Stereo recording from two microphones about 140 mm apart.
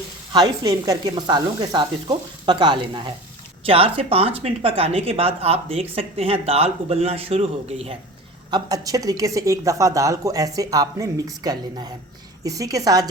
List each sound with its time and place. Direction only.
0.3 s speech: 25° right (ahead or behind); by 7.9 s 45° right (ahead or behind)
8.4 s a woman's voice: 30° right (ahead or behind)